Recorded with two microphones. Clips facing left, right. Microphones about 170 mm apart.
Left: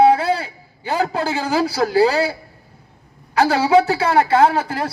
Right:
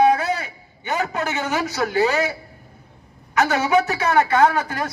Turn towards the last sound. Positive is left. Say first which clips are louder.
# left 2 dB
turn(degrees=30)  # may be behind; listen again after turning